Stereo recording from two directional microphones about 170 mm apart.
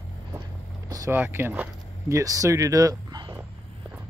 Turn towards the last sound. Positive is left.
turn(degrees=-20)  # may be behind; listen again after turning